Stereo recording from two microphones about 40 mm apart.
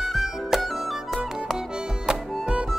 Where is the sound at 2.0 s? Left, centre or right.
Centre.